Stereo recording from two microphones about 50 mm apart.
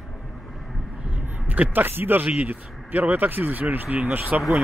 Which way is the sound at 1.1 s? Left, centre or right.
Right.